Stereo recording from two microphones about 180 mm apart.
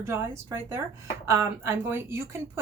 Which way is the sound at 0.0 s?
15° right (ahead or behind).